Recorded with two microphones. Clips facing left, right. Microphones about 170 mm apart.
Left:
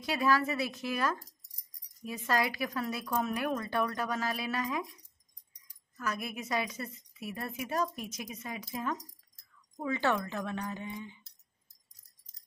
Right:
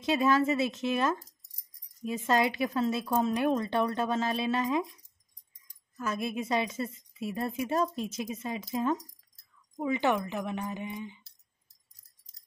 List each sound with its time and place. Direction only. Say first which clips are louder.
0.0 s a woman's voice: right 4 dB; 20° right (ahead or behind)
5.9 s a woman's voice: right 5 dB; 25° right (ahead or behind)